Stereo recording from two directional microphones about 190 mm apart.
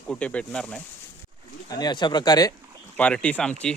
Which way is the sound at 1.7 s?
20° left (ahead or behind).